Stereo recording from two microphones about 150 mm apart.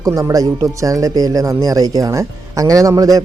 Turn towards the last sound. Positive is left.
turn(degrees=-25)  # may be behind; listen again after turning